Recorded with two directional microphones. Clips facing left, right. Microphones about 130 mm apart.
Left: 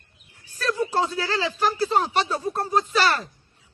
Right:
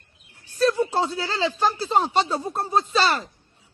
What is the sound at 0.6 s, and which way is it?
A woman's voice, 20° right (ahead or behind).